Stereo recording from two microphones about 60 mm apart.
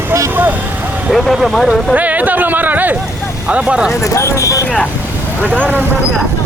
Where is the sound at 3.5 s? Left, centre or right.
Right.